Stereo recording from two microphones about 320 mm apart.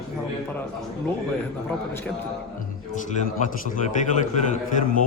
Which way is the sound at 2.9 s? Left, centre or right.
Left.